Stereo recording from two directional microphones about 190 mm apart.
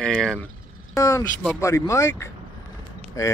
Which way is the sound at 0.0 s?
5° left (ahead or behind).